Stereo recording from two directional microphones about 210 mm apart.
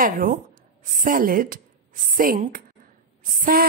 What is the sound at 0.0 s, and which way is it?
A woman's voice, 40° right (ahead or behind).